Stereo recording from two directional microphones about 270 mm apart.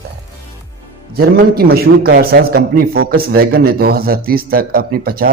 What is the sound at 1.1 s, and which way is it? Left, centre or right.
Speech, right.